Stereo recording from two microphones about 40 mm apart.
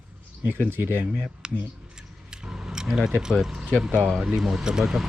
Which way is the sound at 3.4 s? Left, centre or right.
Centre.